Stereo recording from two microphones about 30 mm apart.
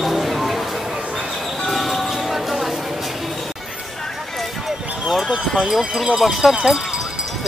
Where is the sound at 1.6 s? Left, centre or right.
Centre.